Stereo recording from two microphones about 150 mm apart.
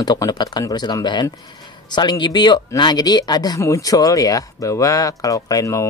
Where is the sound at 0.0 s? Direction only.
25° left (ahead or behind).